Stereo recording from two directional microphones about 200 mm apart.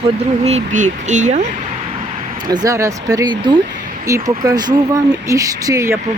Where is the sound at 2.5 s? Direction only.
20° right (ahead or behind).